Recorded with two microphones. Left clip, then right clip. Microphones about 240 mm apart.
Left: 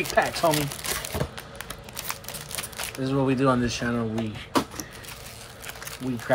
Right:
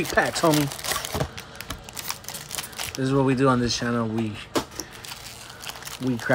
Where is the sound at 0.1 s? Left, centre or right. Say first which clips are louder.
Right 1 dB; right.